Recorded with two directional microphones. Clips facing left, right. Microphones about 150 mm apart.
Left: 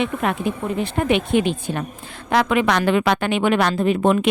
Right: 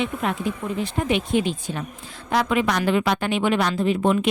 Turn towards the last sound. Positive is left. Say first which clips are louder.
# left 3 dB
turn(degrees=65)  # may be behind; listen again after turning